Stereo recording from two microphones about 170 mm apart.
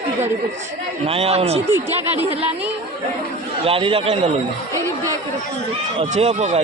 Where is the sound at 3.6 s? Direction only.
35° right (ahead or behind).